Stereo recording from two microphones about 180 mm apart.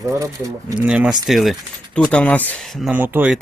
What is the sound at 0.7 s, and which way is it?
Speech, 5° right (ahead or behind).